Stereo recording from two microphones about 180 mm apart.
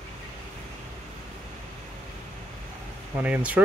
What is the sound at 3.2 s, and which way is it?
Speech, 5° right (ahead or behind).